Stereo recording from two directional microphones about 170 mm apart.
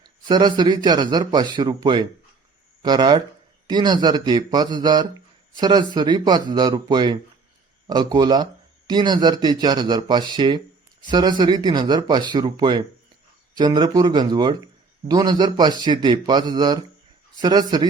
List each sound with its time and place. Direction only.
0.0 s a man's voice: 25° right (ahead or behind)